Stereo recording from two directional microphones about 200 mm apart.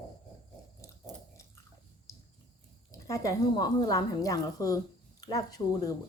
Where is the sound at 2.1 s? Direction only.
15° left (ahead or behind).